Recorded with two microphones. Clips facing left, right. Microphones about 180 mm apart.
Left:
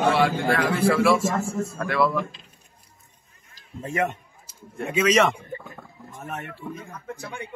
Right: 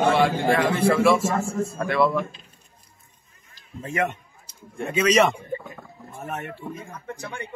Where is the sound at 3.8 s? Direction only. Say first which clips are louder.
Even; 35° left (ahead or behind).